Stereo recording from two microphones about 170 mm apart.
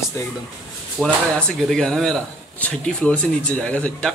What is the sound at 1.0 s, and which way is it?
Speech, 5° left (ahead or behind).